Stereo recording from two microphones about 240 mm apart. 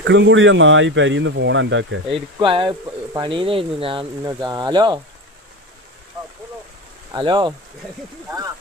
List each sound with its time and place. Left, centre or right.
0.0 s speech: right
2.0 s speech: right
7.1 s speech: centre